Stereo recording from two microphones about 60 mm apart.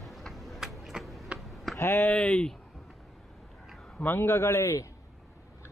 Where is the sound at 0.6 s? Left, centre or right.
Centre.